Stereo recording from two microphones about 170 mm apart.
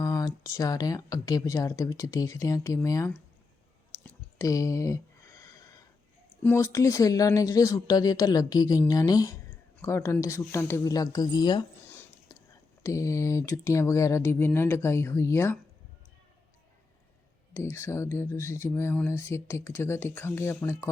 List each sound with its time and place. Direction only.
0.0 s speech: 20° left (ahead or behind)
4.4 s a sound: 20° left (ahead or behind)
6.4 s speech: 15° left (ahead or behind)
11.9 s whispering: 15° left (ahead or behind)
12.8 s speech: 20° left (ahead or behind)
17.5 s speech: 15° left (ahead or behind)